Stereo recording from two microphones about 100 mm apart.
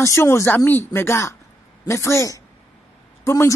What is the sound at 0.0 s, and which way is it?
A woman's voice, 30° left (ahead or behind).